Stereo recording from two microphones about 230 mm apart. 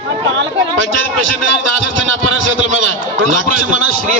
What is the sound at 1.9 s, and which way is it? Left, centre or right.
A man's voice, right.